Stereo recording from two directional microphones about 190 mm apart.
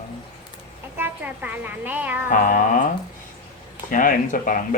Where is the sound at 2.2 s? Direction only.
45° left (ahead or behind).